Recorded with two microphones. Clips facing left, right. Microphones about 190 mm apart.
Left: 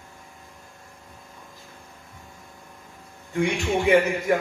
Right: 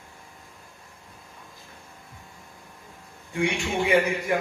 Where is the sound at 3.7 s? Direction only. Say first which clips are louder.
Left 4 dB; 45° left (ahead or behind).